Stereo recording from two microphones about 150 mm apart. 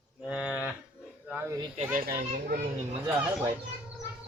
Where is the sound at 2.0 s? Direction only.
75° right (ahead or behind).